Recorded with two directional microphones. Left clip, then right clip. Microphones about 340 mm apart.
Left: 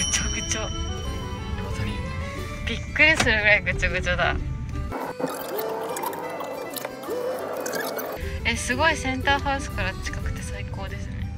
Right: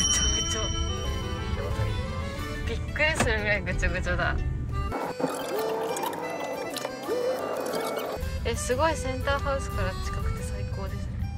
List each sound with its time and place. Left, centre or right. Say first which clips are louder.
0.0 s music: right 1 dB; centre
2.7 s speech: left 8 dB; centre
4.9 s music: left 1 dB; centre